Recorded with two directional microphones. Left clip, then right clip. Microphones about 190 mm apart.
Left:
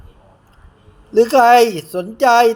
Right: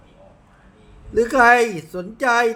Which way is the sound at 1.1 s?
30° left (ahead or behind).